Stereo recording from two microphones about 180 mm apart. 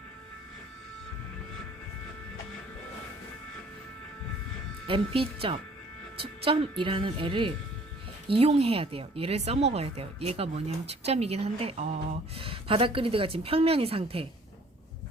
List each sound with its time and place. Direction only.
4.9 s speech: 30° right (ahead or behind)